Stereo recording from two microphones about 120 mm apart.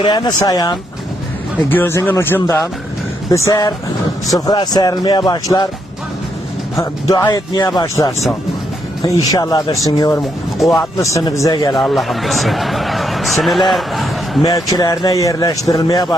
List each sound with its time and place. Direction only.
0.0 s speech: 35° left (ahead or behind)
1.7 s speech: 15° left (ahead or behind); by 5.6 s 35° left (ahead or behind)
7.1 s speech: 30° left (ahead or behind)
9.3 s speech: 30° left (ahead or behind)
11.7 s speech: centre (ahead or behind)
14.4 s speech: 30° left (ahead or behind)